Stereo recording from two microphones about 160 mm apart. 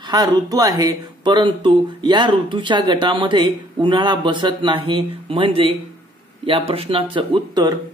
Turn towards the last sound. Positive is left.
turn(degrees=-30)  # may be behind; listen again after turning